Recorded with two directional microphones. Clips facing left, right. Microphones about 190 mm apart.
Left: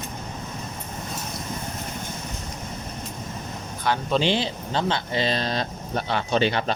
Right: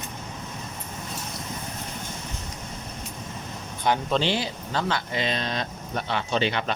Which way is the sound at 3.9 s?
20° right (ahead or behind).